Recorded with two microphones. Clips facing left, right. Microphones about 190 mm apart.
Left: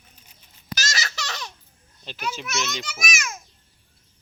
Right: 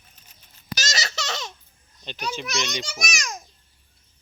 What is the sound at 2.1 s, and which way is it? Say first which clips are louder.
Speech: right 1 dB; 5° left (ahead or behind).